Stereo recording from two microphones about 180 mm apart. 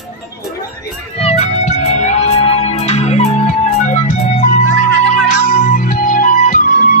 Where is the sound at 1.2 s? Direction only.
35° left (ahead or behind).